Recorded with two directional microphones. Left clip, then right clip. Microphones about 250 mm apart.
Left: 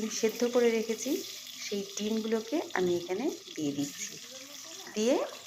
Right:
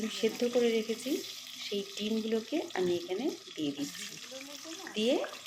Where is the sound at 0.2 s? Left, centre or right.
Centre.